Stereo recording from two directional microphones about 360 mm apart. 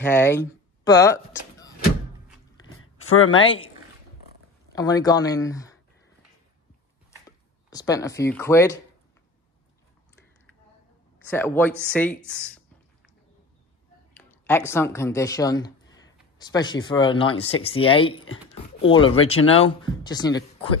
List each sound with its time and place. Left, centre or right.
0.0 s speech: centre
2.6 s a sound: left
4.7 s speech: centre
7.2 s speech: centre
11.2 s speech: centre
14.1 s speech: centre